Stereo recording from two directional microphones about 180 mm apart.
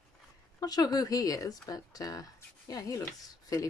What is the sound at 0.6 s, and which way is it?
Speech, 20° left (ahead or behind).